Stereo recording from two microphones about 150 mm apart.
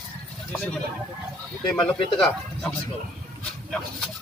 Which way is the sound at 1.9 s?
5° left (ahead or behind).